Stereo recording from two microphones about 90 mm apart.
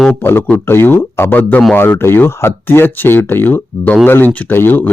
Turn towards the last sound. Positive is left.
turn(degrees=20)  # may be behind; listen again after turning